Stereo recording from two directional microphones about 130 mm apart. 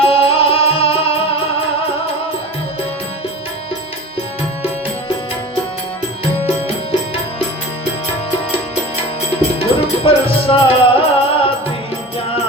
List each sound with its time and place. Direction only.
0.0 s music: 45° left (ahead or behind)
9.6 s music: 45° left (ahead or behind)